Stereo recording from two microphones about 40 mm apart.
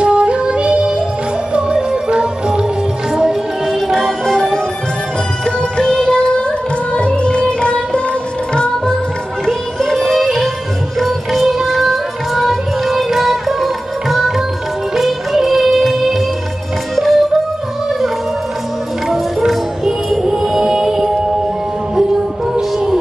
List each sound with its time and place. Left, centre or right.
0.0 s music: right
3.6 s music: centre
5.4 s music: left
9.5 s music: centre
11.0 s music: centre
19.0 s music: centre
22.5 s music: centre